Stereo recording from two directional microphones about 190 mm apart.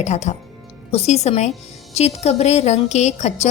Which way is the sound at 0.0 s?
35° left (ahead or behind).